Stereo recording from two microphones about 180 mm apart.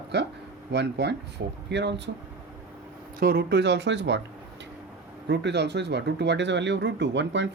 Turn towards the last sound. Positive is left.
turn(degrees=-80)